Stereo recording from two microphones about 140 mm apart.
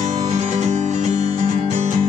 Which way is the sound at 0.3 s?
50° right (ahead or behind).